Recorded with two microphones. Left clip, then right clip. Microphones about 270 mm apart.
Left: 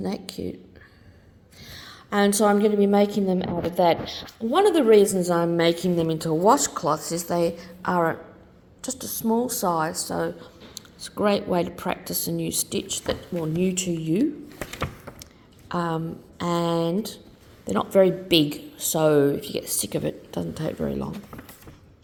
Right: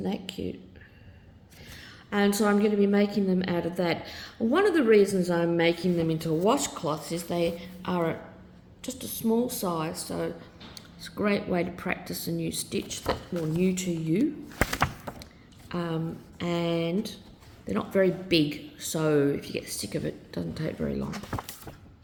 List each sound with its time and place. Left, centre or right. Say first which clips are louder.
0.0 s speech: left 2 dB; centre
1.6 s a woman's voice: left 5 dB; centre
5.2 s speech: left 4 dB; centre
15.1 s a sound: right 2 dB; centre
15.7 s speech: left 6 dB; left